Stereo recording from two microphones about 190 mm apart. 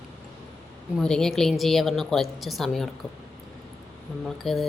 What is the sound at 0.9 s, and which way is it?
A woman's voice, 5° left (ahead or behind).